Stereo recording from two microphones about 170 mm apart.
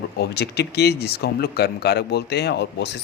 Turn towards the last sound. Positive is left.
turn(degrees=85)